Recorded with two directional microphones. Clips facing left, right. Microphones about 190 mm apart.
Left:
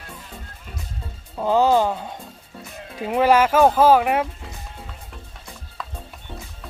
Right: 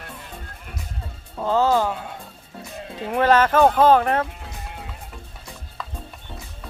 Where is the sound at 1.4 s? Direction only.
15° left (ahead or behind).